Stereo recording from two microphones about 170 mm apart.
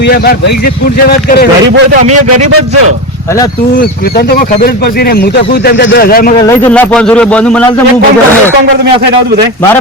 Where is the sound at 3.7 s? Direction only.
65° left (ahead or behind).